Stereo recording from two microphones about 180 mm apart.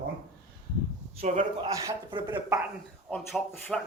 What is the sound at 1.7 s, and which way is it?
Speech, 20° right (ahead or behind).